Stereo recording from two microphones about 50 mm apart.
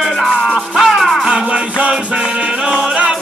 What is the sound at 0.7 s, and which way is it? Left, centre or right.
Music, centre.